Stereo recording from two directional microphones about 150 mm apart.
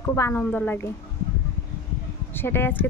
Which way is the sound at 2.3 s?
15° left (ahead or behind).